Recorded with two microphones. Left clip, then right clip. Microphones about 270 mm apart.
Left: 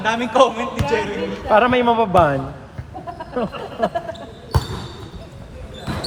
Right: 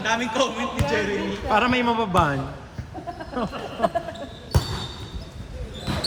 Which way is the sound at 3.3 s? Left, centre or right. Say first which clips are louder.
Left 5 dB; centre.